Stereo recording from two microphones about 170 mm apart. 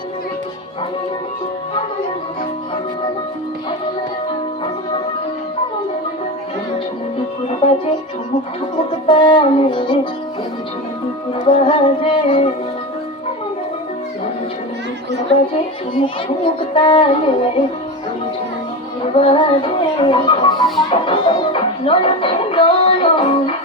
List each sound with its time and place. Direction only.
7.4 s child singing: 35° left (ahead or behind)
8.9 s music: 30° left (ahead or behind)
11.4 s child singing: 30° left (ahead or behind)
16.0 s child singing: 30° left (ahead or behind)
19.1 s music: 30° left (ahead or behind)